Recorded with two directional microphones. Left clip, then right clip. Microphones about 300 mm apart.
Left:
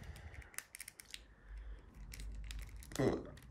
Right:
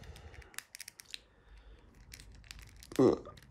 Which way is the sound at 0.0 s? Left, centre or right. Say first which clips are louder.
Right 2 dB; centre.